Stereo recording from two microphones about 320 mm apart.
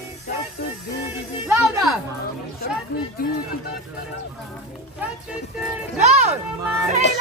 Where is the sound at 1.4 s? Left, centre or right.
Centre.